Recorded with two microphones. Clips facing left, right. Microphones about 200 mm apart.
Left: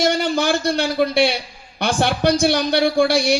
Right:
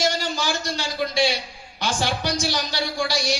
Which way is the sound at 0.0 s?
60° left (ahead or behind).